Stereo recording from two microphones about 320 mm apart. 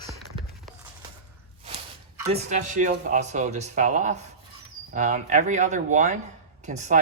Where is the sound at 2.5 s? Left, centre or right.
Right.